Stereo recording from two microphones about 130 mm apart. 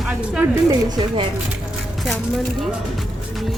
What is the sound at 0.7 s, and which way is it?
Speech, 35° right (ahead or behind).